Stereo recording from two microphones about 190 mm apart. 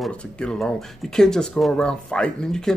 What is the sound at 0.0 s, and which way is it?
Speech, 5° left (ahead or behind).